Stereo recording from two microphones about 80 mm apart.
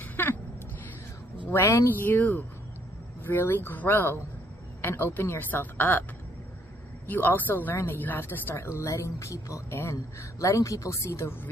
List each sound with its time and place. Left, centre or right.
0.0 s a sound: left
1.5 s speech: left
7.1 s speech: left